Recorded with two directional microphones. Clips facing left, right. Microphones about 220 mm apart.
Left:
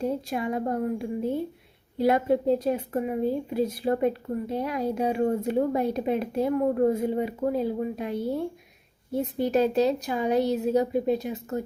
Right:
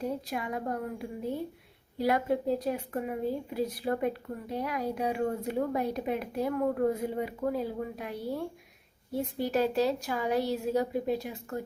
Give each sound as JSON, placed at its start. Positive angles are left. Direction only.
{"t": 0.0, "sound": "a woman's voice", "side_deg": 25}